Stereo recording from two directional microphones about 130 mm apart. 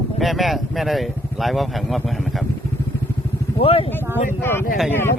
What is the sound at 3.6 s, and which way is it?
Speech, 50° left (ahead or behind).